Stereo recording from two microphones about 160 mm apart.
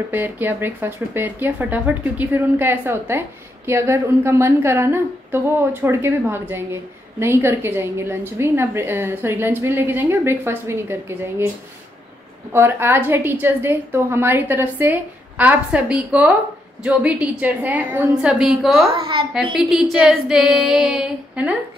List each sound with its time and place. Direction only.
0.1 s speech: 10° right (ahead or behind)
12.5 s speech: 15° right (ahead or behind)
18.9 s a woman's voice: 30° right (ahead or behind)
19.5 s female singing: 5° right (ahead or behind)